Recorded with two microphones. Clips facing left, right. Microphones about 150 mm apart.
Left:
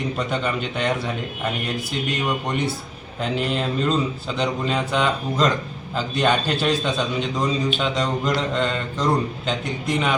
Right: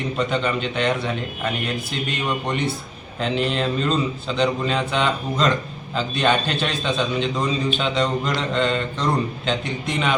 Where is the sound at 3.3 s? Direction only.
10° left (ahead or behind).